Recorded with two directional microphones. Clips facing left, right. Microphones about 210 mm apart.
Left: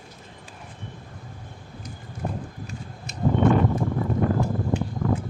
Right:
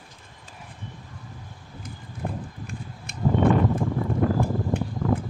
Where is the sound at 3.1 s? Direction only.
55° right (ahead or behind).